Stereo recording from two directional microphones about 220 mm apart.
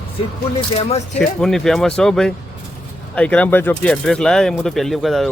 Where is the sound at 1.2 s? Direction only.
Centre (ahead or behind).